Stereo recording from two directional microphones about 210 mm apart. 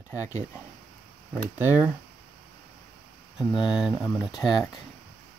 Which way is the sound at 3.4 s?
Centre (ahead or behind).